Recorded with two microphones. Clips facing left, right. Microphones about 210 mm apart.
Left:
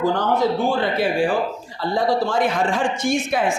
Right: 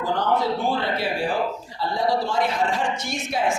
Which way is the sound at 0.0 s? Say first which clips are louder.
Left 3 dB; 45° left (ahead or behind).